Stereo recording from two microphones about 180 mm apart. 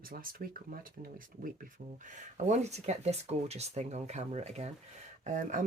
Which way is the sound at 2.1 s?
40° right (ahead or behind).